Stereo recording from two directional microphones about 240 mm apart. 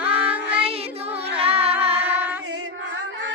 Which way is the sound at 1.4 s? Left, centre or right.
Right.